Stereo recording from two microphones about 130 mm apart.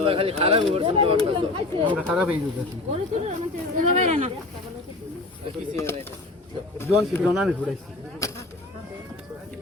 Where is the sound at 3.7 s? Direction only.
70° right (ahead or behind).